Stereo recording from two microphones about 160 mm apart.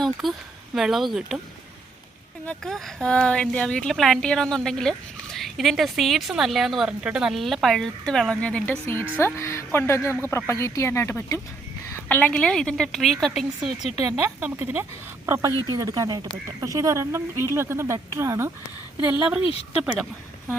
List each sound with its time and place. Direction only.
0.0 s speech: centre (ahead or behind)
2.5 s speech: centre (ahead or behind)
14.2 s speech: 10° right (ahead or behind)